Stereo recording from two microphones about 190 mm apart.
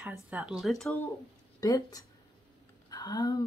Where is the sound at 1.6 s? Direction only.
20° left (ahead or behind).